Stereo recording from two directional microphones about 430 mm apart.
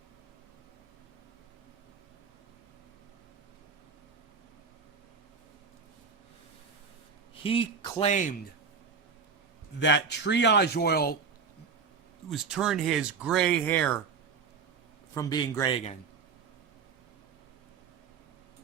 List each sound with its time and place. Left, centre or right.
7.4 s speech: centre
9.8 s speech: left
12.3 s speech: centre
15.1 s speech: centre